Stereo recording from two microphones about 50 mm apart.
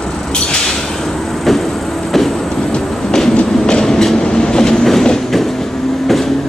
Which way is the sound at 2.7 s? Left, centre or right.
Centre.